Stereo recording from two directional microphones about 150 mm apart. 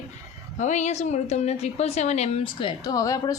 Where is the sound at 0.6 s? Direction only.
50° left (ahead or behind).